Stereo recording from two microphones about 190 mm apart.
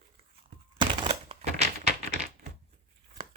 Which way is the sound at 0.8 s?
30° right (ahead or behind).